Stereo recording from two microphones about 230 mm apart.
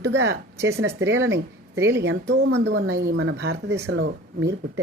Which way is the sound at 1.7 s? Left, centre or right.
Centre.